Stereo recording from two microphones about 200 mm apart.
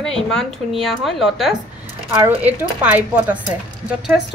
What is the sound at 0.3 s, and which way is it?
A woman's voice, centre (ahead or behind).